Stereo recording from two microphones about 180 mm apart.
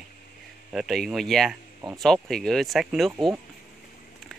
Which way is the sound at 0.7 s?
Centre (ahead or behind).